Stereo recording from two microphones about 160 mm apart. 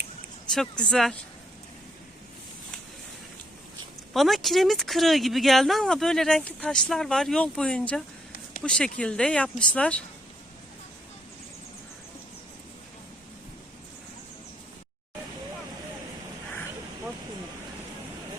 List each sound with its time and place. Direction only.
0.5 s speech: 5° left (ahead or behind)
4.1 s speech: centre (ahead or behind)